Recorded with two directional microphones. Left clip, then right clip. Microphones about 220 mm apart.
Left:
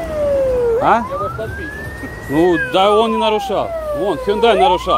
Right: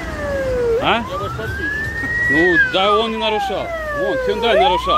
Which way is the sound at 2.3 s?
25° left (ahead or behind).